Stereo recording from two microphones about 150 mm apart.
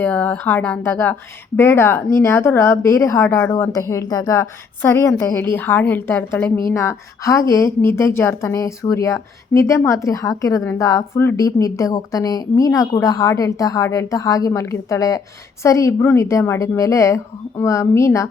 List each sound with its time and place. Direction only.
0.0 s a woman's voice: 10° left (ahead or behind)